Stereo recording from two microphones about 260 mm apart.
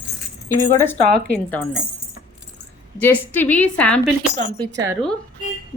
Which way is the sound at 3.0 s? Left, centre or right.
Centre.